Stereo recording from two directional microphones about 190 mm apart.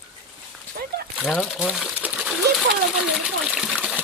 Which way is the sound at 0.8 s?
50° right (ahead or behind).